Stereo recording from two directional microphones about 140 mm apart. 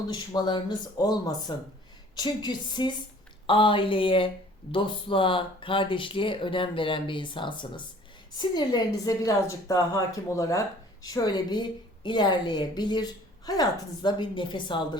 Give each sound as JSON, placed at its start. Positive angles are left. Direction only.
{"t": 0.1, "sound": "a woman's voice", "side_deg": 30}